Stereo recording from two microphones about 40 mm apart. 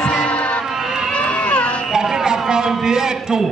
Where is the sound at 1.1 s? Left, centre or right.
Left.